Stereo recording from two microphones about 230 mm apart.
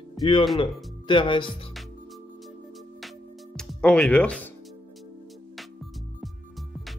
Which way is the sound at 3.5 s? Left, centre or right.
Centre.